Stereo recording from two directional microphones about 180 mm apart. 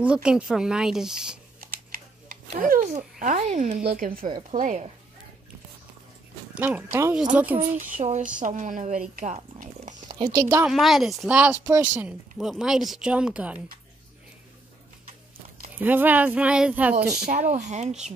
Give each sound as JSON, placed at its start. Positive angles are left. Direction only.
{"t": 0.0, "sound": "speech", "side_deg": -5}
{"t": 1.9, "sound": "speech", "side_deg": -50}
{"t": 6.5, "sound": "speech", "side_deg": -10}
{"t": 7.9, "sound": "speech", "side_deg": -45}
{"t": 9.1, "sound": "a sound", "side_deg": -45}
{"t": 10.1, "sound": "speech", "side_deg": -20}
{"t": 10.7, "sound": "speech", "side_deg": 0}
{"t": 15.8, "sound": "speech", "side_deg": -10}
{"t": 17.6, "sound": "speech", "side_deg": -40}